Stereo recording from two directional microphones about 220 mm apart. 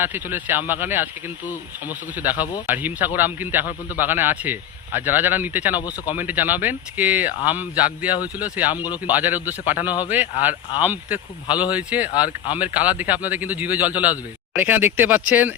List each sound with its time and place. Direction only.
0.0 s a man's voice: 10° right (ahead or behind)
2.1 s a man's voice: 5° right (ahead or behind)
8.7 s speech: 20° left (ahead or behind)
9.0 s a man's voice: 10° right (ahead or behind)